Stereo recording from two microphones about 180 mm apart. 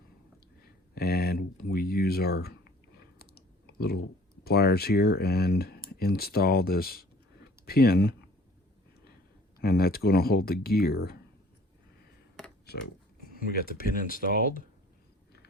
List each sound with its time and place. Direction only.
0.9 s speech: 60° left (ahead or behind)
3.2 s clicking: 60° left (ahead or behind)
4.4 s speech: 60° left (ahead or behind)
9.6 s speech: 60° left (ahead or behind)
13.3 s speech: 55° left (ahead or behind)